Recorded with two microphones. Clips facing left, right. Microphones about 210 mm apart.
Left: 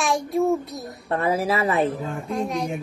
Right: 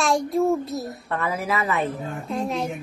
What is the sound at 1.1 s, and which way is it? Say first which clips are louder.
Speech: left 4 dB; 30° left (ahead or behind).